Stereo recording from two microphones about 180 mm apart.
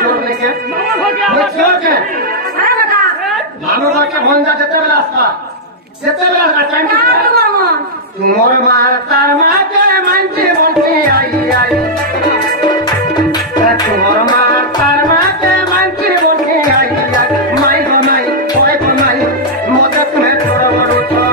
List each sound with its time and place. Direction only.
1.2 s chatter: centre (ahead or behind)
6.6 s a sound: 55° right (ahead or behind)
14.4 s music: 55° right (ahead or behind)
17.2 s music: 55° right (ahead or behind)